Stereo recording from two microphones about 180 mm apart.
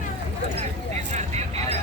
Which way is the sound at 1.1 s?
35° right (ahead or behind).